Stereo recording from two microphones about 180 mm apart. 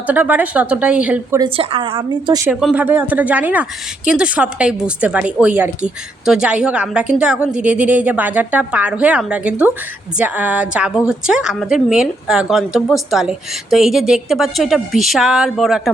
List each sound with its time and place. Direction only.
0.1 s speech: 10° right (ahead or behind)
1.5 s a woman's voice: 30° right (ahead or behind)
2.5 s a woman's voice: 5° right (ahead or behind)